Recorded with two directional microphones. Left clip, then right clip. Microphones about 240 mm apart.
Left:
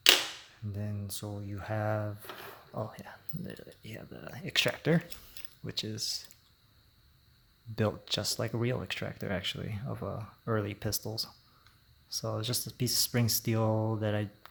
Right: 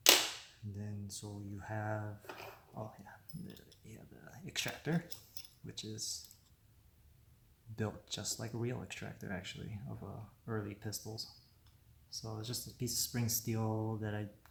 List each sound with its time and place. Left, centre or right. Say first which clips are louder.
0.7 s speech: left 8 dB; left
7.8 s speech: left 10 dB; left